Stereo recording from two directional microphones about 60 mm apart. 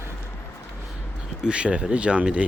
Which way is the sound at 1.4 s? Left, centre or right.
Centre.